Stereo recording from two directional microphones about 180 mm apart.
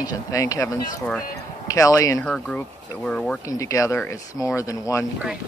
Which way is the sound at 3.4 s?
20° left (ahead or behind).